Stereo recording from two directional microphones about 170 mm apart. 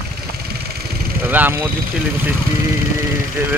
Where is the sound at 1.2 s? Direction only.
10° right (ahead or behind).